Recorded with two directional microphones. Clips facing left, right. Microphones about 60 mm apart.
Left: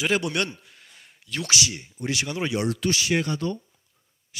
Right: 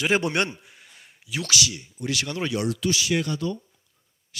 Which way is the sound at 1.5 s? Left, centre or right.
Left.